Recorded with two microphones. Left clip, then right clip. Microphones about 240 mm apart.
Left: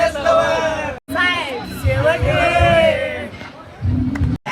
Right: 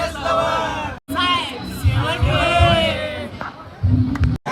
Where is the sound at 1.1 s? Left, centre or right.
Centre.